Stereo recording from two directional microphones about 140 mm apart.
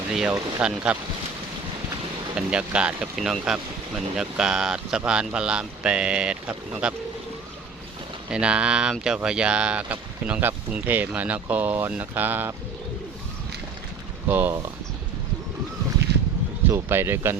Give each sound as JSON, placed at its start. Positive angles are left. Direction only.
{"t": 0.1, "sound": "speech", "side_deg": -5}
{"t": 2.3, "sound": "speech", "side_deg": -5}
{"t": 8.3, "sound": "speech", "side_deg": -5}
{"t": 14.3, "sound": "speech", "side_deg": -15}
{"t": 16.6, "sound": "speech", "side_deg": -15}